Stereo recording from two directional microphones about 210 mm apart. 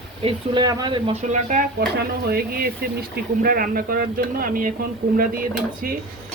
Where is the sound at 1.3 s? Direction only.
40° right (ahead or behind).